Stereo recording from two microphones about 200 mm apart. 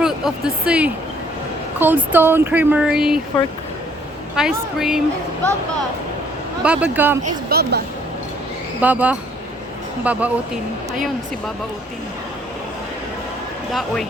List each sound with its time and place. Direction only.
0.0 s speech: 5° right (ahead or behind)
4.4 s a woman's voice: 5° right (ahead or behind)
6.6 s speech: 5° right (ahead or behind)
7.5 s a woman's voice: 55° right (ahead or behind)
8.8 s speech: 10° right (ahead or behind)
13.7 s a woman's voice: centre (ahead or behind)